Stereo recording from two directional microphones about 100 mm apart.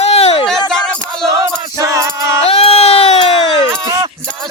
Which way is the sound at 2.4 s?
75° left (ahead or behind).